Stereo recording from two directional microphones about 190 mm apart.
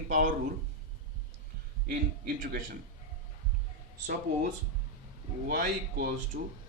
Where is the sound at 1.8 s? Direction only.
50° right (ahead or behind).